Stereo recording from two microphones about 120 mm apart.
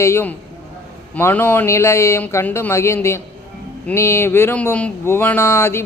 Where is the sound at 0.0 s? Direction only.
20° left (ahead or behind).